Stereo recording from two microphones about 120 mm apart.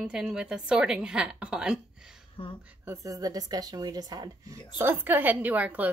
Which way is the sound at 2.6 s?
15° right (ahead or behind).